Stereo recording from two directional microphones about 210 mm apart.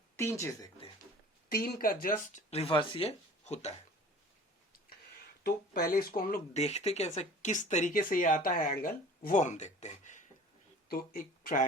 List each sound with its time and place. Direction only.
0.2 s speech: 15° left (ahead or behind)
1.5 s speech: 45° left (ahead or behind)
5.4 s speech: 45° left (ahead or behind)
6.6 s speech: 30° left (ahead or behind)